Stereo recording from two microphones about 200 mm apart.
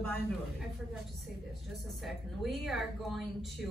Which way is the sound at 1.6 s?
Centre (ahead or behind).